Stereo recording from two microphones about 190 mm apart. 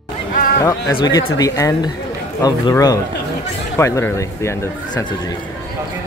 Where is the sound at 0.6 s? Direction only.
20° left (ahead or behind).